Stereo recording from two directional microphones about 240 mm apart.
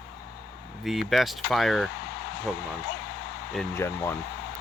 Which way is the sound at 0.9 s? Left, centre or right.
Centre.